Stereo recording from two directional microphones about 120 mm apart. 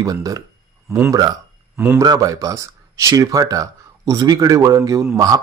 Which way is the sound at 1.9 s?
30° right (ahead or behind).